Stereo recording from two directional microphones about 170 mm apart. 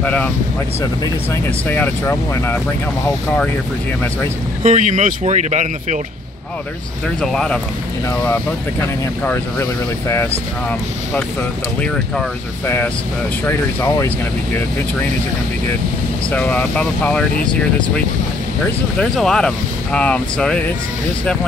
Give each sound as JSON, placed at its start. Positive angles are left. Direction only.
{"t": 0.0, "sound": "speech", "side_deg": 10}
{"t": 4.6, "sound": "speech", "side_deg": -45}
{"t": 7.2, "sound": "speech", "side_deg": 5}
{"t": 12.6, "sound": "speech", "side_deg": 15}
{"t": 16.3, "sound": "speech", "side_deg": 10}
{"t": 18.9, "sound": "speech", "side_deg": 5}